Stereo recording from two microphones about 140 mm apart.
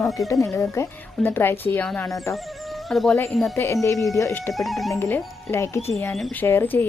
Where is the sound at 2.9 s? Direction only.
Centre (ahead or behind).